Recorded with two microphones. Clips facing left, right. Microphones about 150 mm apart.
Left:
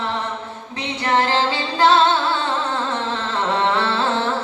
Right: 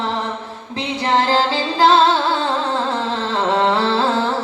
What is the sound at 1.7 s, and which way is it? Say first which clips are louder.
Music: right 2 dB; 30° right (ahead or behind).